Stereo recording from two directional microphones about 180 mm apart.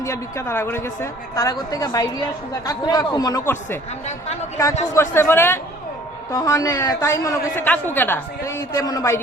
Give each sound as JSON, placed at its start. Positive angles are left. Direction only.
{"t": 0.0, "sound": "speech", "side_deg": 15}
{"t": 4.9, "sound": "a woman's voice", "side_deg": 15}